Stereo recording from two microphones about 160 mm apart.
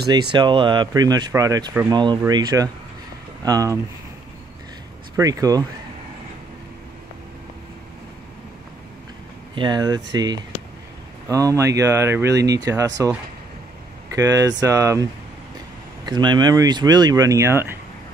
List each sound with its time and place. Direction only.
0.1 s speech: 25° right (ahead or behind)
5.1 s speech: 20° right (ahead or behind)
9.6 s speech: 25° right (ahead or behind)
14.1 s speech: 20° right (ahead or behind)
16.1 s speech: 25° right (ahead or behind)